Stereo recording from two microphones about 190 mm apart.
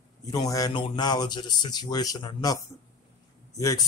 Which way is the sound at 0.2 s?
20° left (ahead or behind).